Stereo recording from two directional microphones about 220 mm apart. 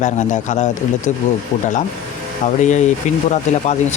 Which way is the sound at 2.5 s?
35° left (ahead or behind).